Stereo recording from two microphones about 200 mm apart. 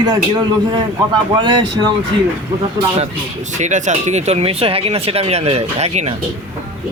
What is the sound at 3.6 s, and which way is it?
Speech, 35° right (ahead or behind).